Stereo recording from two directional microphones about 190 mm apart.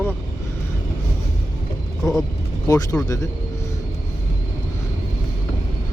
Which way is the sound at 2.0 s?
20° left (ahead or behind).